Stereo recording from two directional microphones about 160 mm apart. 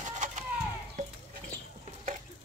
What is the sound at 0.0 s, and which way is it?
Bird, 50° right (ahead or behind).